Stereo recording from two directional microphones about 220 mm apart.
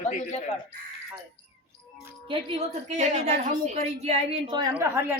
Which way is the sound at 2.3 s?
25° right (ahead or behind).